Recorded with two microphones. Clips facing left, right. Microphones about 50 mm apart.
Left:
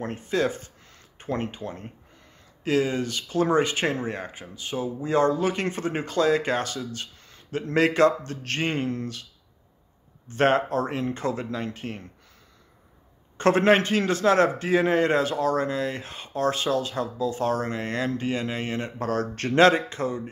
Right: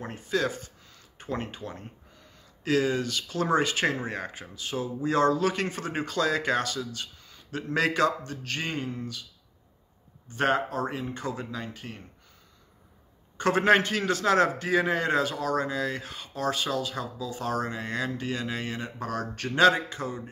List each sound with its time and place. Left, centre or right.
0.0 s speech: left
7.2 s a sound: left
7.7 s speech: left
8.3 s speech: left
8.8 s speech: left
10.3 s speech: left
13.4 s a man's voice: left
13.7 s speech: left
17.9 s speech: left
18.8 s speech: left